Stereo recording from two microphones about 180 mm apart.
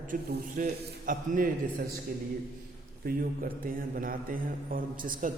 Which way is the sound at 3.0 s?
50° right (ahead or behind).